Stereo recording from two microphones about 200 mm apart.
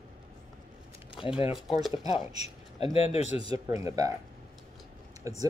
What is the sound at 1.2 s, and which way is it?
Speech, 25° left (ahead or behind).